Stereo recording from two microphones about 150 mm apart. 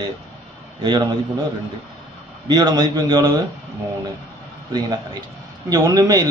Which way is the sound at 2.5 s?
30° right (ahead or behind).